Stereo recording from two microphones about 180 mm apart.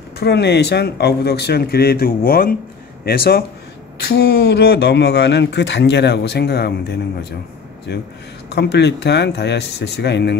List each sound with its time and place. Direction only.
0.2 s speech: 65° left (ahead or behind)